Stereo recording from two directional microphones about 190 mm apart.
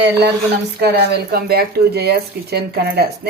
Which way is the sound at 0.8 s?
60° right (ahead or behind).